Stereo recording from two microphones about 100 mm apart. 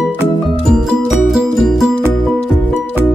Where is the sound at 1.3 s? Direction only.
Centre (ahead or behind).